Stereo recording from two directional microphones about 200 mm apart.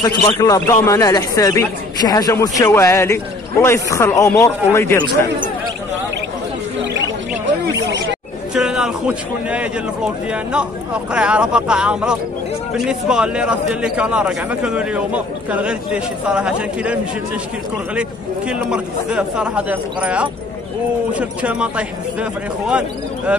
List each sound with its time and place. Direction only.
0.0 s a man's voice: 20° left (ahead or behind)
8.5 s a man's voice: 5° right (ahead or behind)
18.5 s a man's voice: 5° right (ahead or behind)